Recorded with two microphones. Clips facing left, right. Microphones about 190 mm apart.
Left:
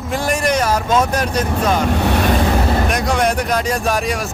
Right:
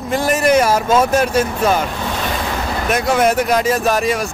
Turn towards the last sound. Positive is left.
turn(degrees=0)  # may be behind; listen again after turning